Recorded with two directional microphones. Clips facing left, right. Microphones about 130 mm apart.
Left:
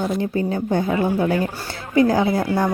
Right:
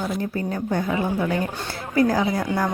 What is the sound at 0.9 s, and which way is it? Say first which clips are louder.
Speech: left 4 dB; 25° left (ahead or behind).